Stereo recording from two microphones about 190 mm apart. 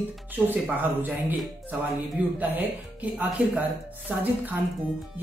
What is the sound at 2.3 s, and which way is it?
Speech, 10° right (ahead or behind).